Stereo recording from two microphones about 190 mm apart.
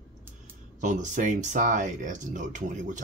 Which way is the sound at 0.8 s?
40° right (ahead or behind).